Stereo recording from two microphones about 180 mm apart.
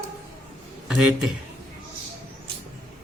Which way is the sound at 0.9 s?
5° right (ahead or behind).